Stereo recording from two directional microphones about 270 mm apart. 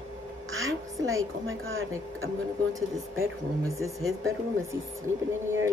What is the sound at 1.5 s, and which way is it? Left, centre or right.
Speech, right.